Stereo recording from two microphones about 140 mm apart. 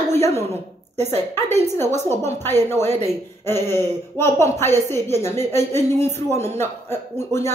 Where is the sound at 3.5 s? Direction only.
15° left (ahead or behind).